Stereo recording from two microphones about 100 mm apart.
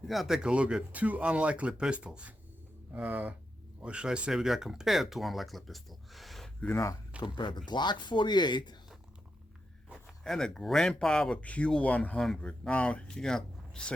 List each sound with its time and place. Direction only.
0.0 s speech: centre (ahead or behind)
6.6 s speech: 25° left (ahead or behind)
7.2 s speech: 50° left (ahead or behind)
10.2 s speech: 5° left (ahead or behind)